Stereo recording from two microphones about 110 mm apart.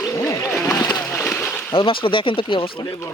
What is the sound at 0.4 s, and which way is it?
Splash, 30° left (ahead or behind).